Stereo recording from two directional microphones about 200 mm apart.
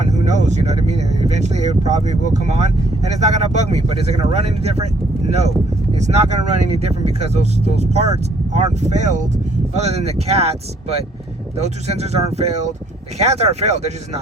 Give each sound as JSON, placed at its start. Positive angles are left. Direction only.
{"t": 0.0, "sound": "speech", "side_deg": -35}
{"t": 5.9, "sound": "speech", "side_deg": -35}